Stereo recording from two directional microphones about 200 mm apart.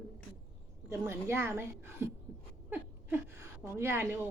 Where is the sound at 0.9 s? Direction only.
15° right (ahead or behind).